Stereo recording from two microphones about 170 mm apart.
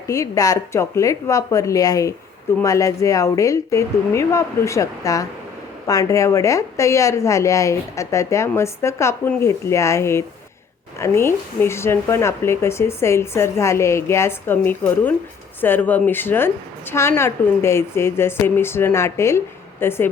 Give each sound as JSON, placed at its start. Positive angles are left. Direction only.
{"t": 0.1, "sound": "speech", "side_deg": 20}